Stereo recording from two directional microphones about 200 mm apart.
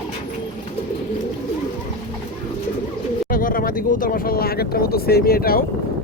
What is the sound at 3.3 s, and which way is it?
Speech, 45° left (ahead or behind).